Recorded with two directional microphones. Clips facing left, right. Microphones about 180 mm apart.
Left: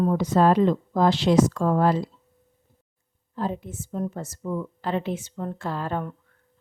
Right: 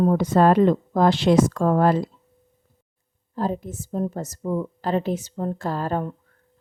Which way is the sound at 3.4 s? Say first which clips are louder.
Right 3 dB; 40° right (ahead or behind).